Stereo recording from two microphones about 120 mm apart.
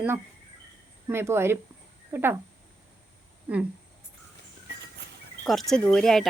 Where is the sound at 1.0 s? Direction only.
20° right (ahead or behind).